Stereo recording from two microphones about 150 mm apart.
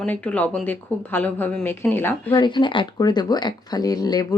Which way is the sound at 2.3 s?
30° left (ahead or behind).